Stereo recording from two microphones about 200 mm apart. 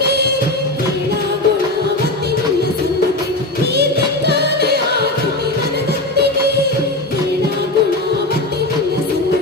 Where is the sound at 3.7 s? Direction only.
55° right (ahead or behind).